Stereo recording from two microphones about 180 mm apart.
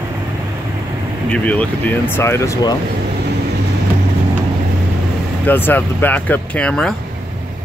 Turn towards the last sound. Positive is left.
turn(degrees=5)  # may be behind; listen again after turning